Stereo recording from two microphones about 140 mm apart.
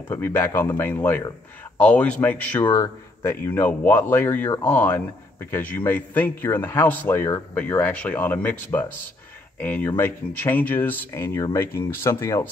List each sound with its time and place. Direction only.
0.1 s a man's voice: 15° left (ahead or behind)
2.7 s a man's voice: 20° left (ahead or behind)
9.6 s a man's voice: 15° left (ahead or behind)